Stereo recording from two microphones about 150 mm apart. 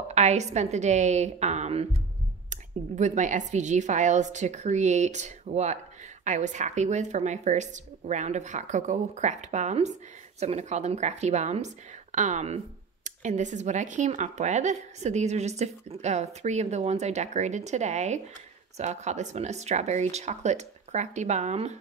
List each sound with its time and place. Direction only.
0.1 s a woman's voice: 50° right (ahead or behind)